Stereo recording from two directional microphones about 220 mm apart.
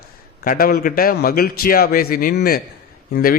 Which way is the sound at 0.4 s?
40° left (ahead or behind).